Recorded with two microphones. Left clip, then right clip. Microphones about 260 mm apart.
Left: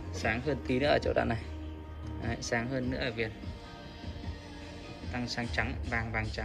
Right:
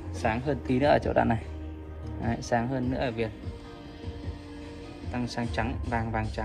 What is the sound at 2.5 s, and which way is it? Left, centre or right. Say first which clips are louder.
Speech: right 5 dB; right.